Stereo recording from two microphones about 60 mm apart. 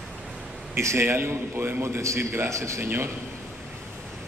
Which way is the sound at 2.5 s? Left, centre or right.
Right.